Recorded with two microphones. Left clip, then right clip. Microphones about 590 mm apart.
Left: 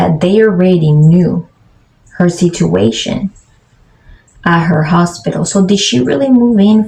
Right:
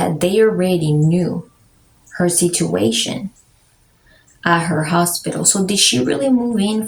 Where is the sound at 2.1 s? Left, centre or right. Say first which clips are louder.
Left 4 dB; right.